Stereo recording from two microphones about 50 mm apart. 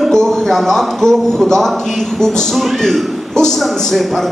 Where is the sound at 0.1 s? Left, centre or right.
Centre.